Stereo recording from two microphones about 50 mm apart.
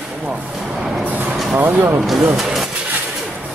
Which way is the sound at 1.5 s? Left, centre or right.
Right.